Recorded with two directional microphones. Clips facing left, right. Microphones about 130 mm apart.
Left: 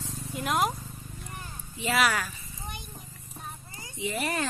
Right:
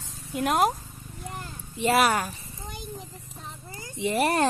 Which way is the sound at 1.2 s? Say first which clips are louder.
Right 7 dB; 75° right (ahead or behind).